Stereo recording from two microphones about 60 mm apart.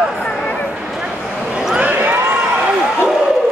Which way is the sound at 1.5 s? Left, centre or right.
Centre.